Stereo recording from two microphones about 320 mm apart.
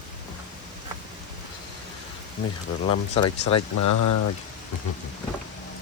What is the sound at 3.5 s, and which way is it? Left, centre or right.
Speech, left.